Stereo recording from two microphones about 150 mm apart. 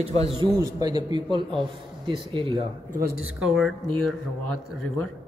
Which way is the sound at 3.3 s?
Centre (ahead or behind).